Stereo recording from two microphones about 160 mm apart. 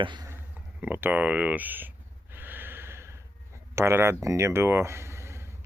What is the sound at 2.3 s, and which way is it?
Gasp, 10° right (ahead or behind).